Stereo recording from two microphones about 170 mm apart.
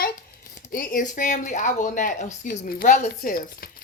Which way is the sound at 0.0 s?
60° left (ahead or behind).